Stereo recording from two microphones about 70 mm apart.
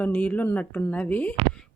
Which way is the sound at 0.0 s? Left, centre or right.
Left.